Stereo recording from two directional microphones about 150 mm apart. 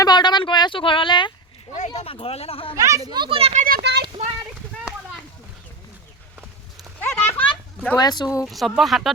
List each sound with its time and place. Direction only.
0.0 s a sound: 30° left (ahead or behind)
1.9 s speech: 35° left (ahead or behind)
2.7 s speech: 20° right (ahead or behind)
3.1 s speech: 35° right (ahead or behind)
7.0 s a sound: 15° left (ahead or behind)
7.9 s speech: 25° left (ahead or behind)
8.4 s speech: centre (ahead or behind)